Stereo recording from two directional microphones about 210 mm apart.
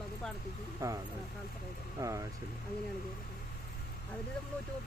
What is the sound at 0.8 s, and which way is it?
Speech, 15° right (ahead or behind).